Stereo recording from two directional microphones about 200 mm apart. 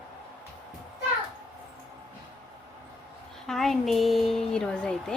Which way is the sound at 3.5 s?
Centre (ahead or behind).